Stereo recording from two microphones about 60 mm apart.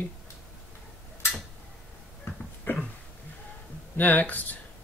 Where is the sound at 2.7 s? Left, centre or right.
Left.